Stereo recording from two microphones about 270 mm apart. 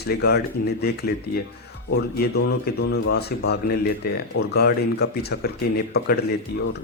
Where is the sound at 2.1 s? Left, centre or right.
Left.